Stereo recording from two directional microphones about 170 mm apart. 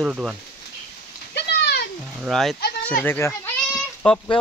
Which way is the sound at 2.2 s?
Centre (ahead or behind).